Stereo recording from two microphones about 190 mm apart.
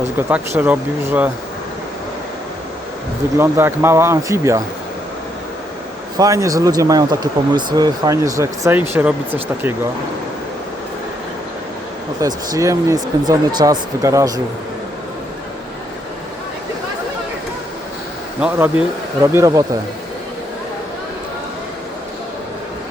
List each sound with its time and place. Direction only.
0.2 s speech: 10° right (ahead or behind)
3.3 s speech: 10° right (ahead or behind)
6.1 s speech: 15° right (ahead or behind)
12.2 s speech: 15° right (ahead or behind)
18.3 s speech: 5° right (ahead or behind)